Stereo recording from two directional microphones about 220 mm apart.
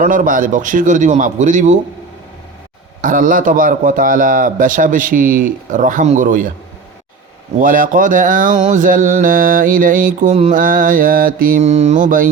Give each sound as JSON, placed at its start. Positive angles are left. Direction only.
{"t": 0.0, "sound": "speech", "side_deg": -35}
{"t": 3.0, "sound": "speech", "side_deg": -35}
{"t": 7.6, "sound": "speech", "side_deg": -40}